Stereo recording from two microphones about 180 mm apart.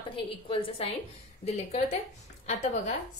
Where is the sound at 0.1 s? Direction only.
30° left (ahead or behind).